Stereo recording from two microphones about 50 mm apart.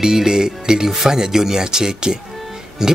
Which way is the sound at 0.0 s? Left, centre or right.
Centre.